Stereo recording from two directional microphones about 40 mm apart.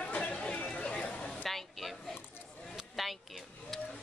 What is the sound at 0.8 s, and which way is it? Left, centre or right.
Speech, left.